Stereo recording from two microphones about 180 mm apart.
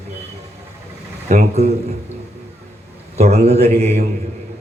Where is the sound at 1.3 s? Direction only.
35° right (ahead or behind).